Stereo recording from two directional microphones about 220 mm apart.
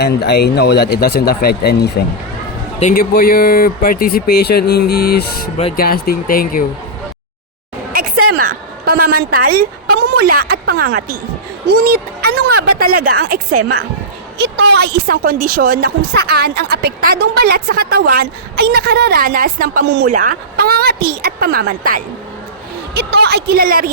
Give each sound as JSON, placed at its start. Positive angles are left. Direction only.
{"t": 0.0, "sound": "speech", "side_deg": 50}
{"t": 8.3, "sound": "a woman's voice", "side_deg": -40}